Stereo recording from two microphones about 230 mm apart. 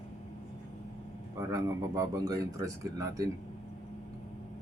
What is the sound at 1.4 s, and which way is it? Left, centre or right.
Speech, centre.